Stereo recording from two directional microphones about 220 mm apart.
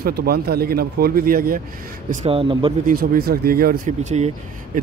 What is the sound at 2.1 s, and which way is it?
Speech, 30° right (ahead or behind).